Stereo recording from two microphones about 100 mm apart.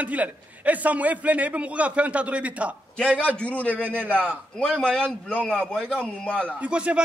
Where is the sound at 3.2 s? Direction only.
15° left (ahead or behind).